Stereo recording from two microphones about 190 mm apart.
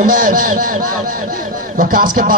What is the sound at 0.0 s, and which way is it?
Speech, 45° right (ahead or behind).